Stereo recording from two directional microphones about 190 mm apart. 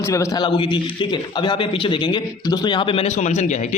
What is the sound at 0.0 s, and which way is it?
A man's voice, 15° left (ahead or behind).